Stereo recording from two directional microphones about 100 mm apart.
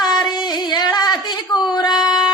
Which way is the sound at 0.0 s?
45° left (ahead or behind).